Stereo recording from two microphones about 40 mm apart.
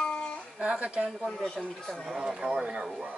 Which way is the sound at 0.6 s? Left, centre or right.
Right.